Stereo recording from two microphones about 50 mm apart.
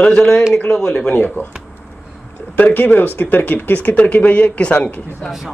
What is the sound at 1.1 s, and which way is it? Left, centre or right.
Speech, left.